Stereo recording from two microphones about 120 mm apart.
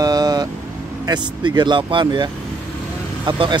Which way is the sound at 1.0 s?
35° right (ahead or behind).